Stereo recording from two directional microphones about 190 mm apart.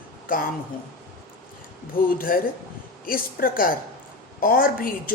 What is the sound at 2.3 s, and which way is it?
Speech, 50° left (ahead or behind).